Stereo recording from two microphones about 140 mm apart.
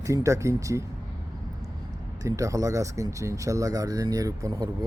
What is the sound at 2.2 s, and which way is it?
Speech, 25° right (ahead or behind).